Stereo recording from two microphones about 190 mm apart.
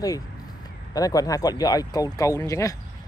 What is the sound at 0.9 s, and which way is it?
Speech, 20° left (ahead or behind).